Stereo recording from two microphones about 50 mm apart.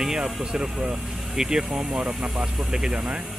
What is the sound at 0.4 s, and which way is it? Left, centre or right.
Speech, centre.